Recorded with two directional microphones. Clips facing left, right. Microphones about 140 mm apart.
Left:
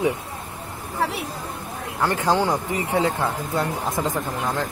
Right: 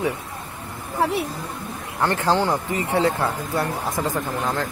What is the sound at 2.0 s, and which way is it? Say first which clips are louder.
Speech: even; 10° left (ahead or behind).